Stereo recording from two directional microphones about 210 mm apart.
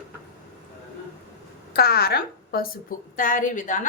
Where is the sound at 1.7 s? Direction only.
45° left (ahead or behind).